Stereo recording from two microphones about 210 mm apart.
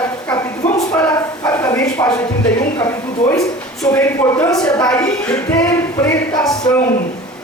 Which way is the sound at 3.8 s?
15° left (ahead or behind).